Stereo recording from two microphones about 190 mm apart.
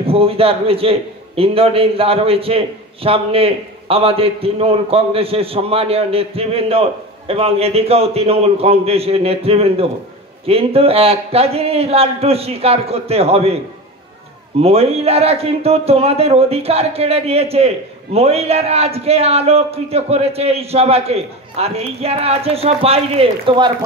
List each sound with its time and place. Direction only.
0.0 s a man's voice: 30° right (ahead or behind)
14.6 s a man's voice: 30° right (ahead or behind)